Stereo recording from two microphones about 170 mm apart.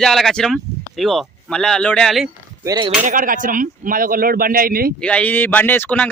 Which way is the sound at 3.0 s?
55° right (ahead or behind).